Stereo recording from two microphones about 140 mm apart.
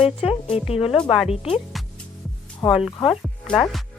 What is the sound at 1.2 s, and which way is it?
Speech, 45° left (ahead or behind).